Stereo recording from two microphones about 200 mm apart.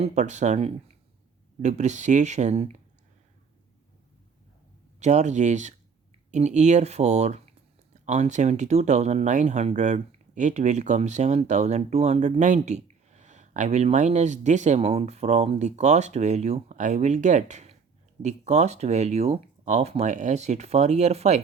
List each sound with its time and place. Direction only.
0.0 s speech: 35° right (ahead or behind)
4.9 s speech: 35° right (ahead or behind)